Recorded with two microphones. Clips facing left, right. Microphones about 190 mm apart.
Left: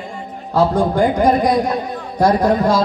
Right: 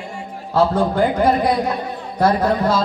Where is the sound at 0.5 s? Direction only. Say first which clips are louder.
Left 1 dB; 15° left (ahead or behind).